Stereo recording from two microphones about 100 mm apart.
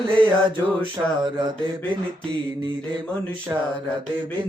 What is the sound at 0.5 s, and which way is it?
Mantra, 50° right (ahead or behind).